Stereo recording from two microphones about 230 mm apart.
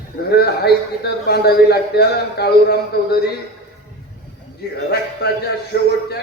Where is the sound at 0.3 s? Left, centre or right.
Left.